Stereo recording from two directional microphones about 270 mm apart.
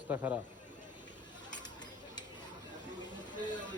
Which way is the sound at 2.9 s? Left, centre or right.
Centre.